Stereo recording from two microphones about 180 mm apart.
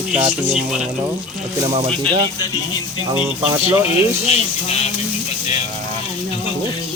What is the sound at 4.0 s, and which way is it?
Speech, 35° left (ahead or behind).